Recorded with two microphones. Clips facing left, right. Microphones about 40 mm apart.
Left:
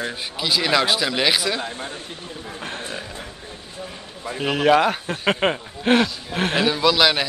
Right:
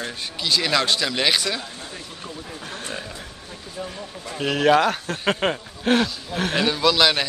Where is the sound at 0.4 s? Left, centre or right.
Centre.